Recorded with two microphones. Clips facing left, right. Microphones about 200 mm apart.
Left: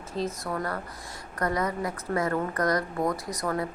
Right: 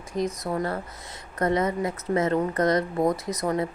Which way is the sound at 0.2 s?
20° right (ahead or behind).